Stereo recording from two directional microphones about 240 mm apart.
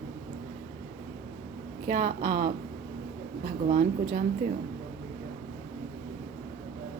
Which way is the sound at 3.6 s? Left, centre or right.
Right.